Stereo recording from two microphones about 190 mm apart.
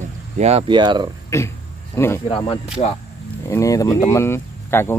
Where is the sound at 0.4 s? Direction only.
35° right (ahead or behind).